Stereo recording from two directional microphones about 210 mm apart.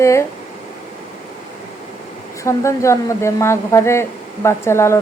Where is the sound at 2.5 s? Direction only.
15° left (ahead or behind).